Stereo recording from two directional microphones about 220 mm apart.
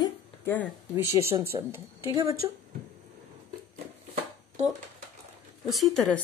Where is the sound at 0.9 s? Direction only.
10° right (ahead or behind).